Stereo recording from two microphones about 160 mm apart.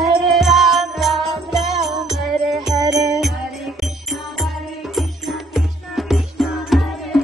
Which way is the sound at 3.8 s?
Centre (ahead or behind).